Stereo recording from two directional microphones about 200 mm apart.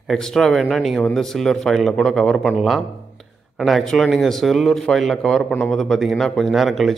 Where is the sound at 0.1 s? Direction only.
Centre (ahead or behind).